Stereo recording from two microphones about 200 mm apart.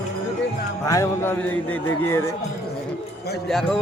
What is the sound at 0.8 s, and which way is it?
A man's voice, 15° left (ahead or behind).